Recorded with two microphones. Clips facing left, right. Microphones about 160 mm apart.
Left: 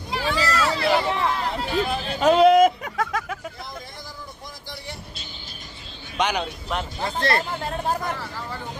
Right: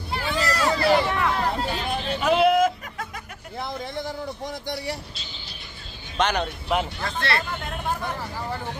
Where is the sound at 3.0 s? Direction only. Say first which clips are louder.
Left 12 dB; 90° left.